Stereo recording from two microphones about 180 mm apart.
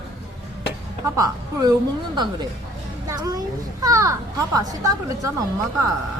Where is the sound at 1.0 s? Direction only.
20° right (ahead or behind).